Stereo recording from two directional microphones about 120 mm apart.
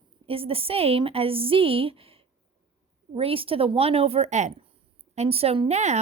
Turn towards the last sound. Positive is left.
turn(degrees=-70)  # may be behind; listen again after turning